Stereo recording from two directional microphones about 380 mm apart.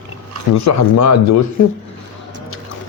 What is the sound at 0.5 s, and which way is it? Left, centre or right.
Speech, left.